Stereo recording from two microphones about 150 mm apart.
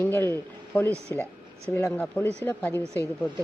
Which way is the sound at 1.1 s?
15° left (ahead or behind).